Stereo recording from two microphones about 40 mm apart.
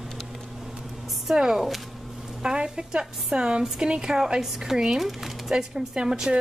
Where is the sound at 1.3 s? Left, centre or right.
Centre.